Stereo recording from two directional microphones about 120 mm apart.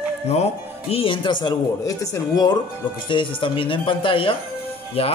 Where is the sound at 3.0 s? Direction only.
45° left (ahead or behind).